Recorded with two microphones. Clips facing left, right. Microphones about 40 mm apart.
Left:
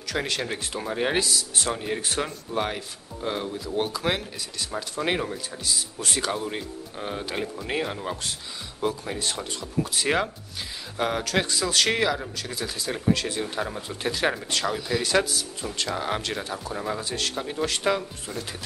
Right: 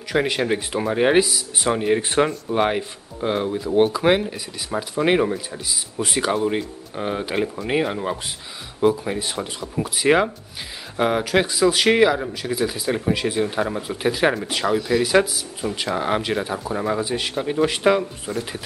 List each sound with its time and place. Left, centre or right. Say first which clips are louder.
0.1 s speech: right 8 dB; centre